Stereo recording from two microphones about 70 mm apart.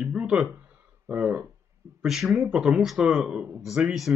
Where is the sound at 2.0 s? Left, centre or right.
Centre.